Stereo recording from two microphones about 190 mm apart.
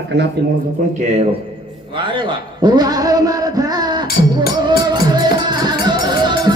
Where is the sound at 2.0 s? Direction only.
25° right (ahead or behind).